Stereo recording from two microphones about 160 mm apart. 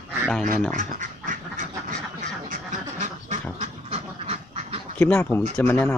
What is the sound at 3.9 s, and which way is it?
Duck, 40° right (ahead or behind).